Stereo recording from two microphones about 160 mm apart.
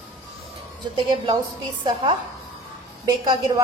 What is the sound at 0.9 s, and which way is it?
Speech, 30° right (ahead or behind).